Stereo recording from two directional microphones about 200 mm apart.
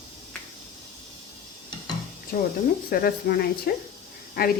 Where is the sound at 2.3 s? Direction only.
50° left (ahead or behind).